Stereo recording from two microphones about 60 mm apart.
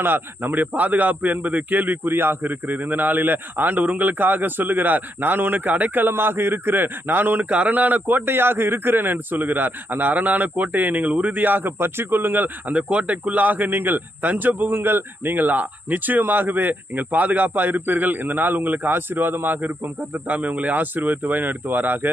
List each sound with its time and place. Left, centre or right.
0.0 s speech: right